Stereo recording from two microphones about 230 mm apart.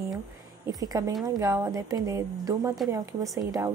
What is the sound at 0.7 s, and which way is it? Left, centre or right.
A woman's voice, centre.